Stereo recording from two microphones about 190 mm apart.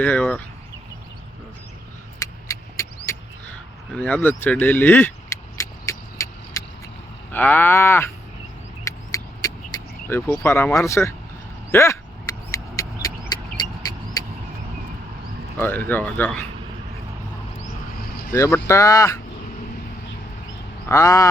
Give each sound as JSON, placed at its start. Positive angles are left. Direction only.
{"t": 0.0, "sound": "cattle", "side_deg": 5}
{"t": 2.1, "sound": "vehicle", "side_deg": 15}
{"t": 3.1, "sound": "a sound", "side_deg": 15}
{"t": 7.3, "sound": "cattle", "side_deg": 10}
{"t": 8.8, "sound": "vehicle", "side_deg": 15}
{"t": 11.7, "sound": "a sound", "side_deg": 15}
{"t": 15.5, "sound": "speech", "side_deg": 10}
{"t": 15.9, "sound": "cattle", "side_deg": 10}
{"t": 18.3, "sound": "cattle", "side_deg": 15}
{"t": 20.8, "sound": "a sound", "side_deg": 15}